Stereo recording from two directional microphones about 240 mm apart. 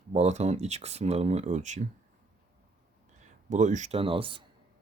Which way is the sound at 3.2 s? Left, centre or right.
Right.